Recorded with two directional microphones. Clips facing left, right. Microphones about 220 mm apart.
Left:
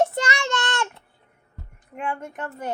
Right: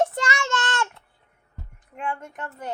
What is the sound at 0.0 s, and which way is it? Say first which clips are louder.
Child singing: left 2 dB; 25° left (ahead or behind).